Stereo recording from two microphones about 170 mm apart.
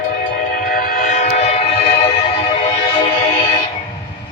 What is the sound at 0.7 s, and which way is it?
Train, 55° left (ahead or behind).